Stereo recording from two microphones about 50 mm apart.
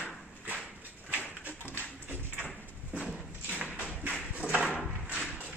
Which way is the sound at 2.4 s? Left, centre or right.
Right.